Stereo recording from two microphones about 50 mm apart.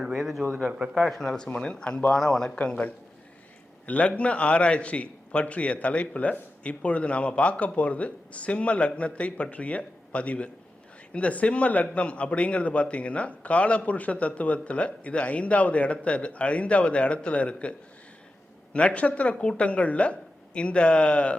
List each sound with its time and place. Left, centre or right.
0.0 s a man's voice: centre
1.5 s a man's voice: centre
2.1 s speech: centre
3.8 s a man's voice: left